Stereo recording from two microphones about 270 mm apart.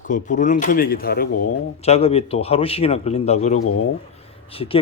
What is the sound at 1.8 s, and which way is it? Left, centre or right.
Speech, left.